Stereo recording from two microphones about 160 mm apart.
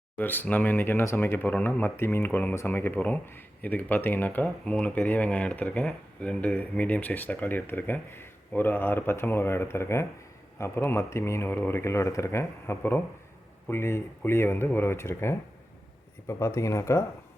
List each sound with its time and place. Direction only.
0.2 s speech: 10° left (ahead or behind)